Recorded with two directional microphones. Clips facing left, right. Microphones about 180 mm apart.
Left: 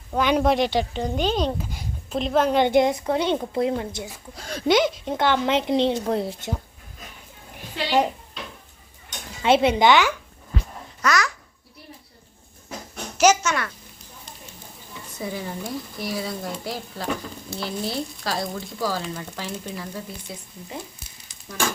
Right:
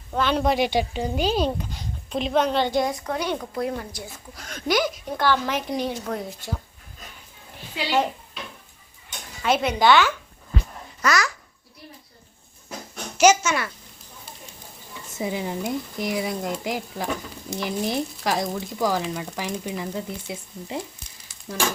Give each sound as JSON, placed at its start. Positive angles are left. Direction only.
{"t": 0.1, "sound": "speech", "side_deg": 10}
{"t": 0.6, "sound": "speech", "side_deg": -10}
{"t": 1.7, "sound": "a sound", "side_deg": 5}
{"t": 2.6, "sound": "a woman's voice", "side_deg": 20}
{"t": 9.4, "sound": "a woman's voice", "side_deg": 25}
{"t": 11.0, "sound": "a child's voice", "side_deg": 0}
{"t": 13.1, "sound": "a child's voice", "side_deg": 0}
{"t": 15.2, "sound": "speech", "side_deg": -15}